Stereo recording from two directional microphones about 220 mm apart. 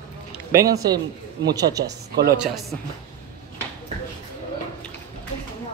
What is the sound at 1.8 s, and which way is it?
Speech, 45° right (ahead or behind).